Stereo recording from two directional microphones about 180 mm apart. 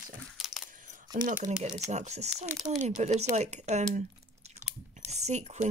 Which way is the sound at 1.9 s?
40° right (ahead or behind).